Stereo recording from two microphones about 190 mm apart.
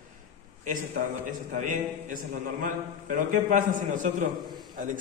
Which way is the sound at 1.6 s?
40° right (ahead or behind).